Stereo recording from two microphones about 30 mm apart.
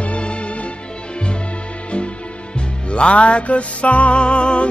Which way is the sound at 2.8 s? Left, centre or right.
Left.